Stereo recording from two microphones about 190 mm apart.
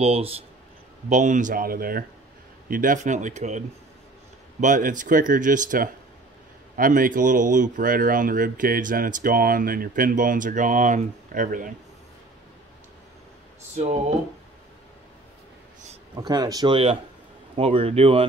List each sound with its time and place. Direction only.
0.0 s speech: 30° right (ahead or behind)
16.2 s speech: 20° right (ahead or behind)